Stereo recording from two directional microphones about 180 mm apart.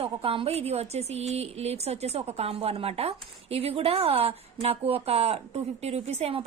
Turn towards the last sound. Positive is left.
turn(degrees=-35)  # may be behind; listen again after turning